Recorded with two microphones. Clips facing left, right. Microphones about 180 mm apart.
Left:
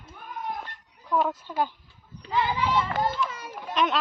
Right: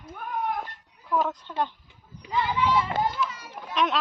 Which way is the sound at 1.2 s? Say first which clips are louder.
Left 1 dB; 10° left (ahead or behind).